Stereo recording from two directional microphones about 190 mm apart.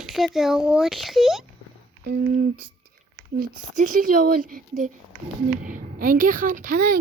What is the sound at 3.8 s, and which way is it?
A woman's voice, 45° right (ahead or behind).